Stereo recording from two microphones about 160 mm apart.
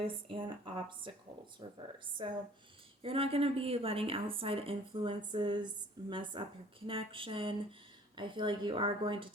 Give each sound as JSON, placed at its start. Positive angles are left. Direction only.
{"t": 0.0, "sound": "a woman's voice", "side_deg": -35}